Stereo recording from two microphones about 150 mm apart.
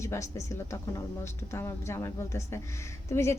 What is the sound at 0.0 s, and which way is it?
A woman's voice, 20° left (ahead or behind).